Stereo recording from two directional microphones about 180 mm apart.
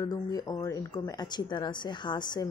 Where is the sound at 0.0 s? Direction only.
20° left (ahead or behind).